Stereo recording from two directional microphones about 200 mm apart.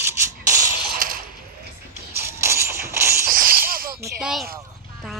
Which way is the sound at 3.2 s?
45° right (ahead or behind).